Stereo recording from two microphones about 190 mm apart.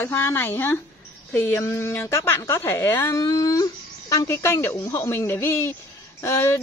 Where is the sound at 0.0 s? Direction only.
15° left (ahead or behind).